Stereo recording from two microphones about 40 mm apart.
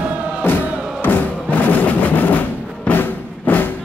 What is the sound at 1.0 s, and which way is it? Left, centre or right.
Music, left.